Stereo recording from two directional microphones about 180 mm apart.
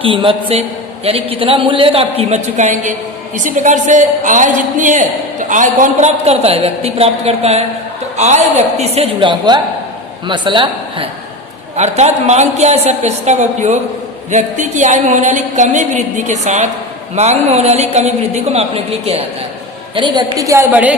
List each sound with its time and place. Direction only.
0.0 s a woman's voice: 30° right (ahead or behind)
20.0 s a woman's voice: 20° right (ahead or behind)